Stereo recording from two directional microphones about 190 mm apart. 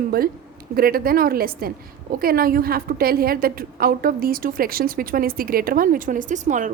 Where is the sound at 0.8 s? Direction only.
50° right (ahead or behind).